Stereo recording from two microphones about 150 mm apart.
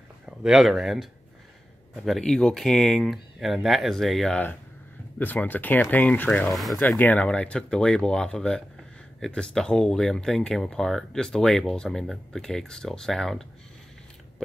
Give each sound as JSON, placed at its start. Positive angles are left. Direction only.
{"t": 0.4, "sound": "speech", "side_deg": 0}
{"t": 2.0, "sound": "speech", "side_deg": 0}
{"t": 5.2, "sound": "speech", "side_deg": 10}